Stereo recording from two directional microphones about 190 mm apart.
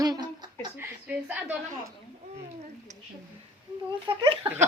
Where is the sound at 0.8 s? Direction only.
10° right (ahead or behind).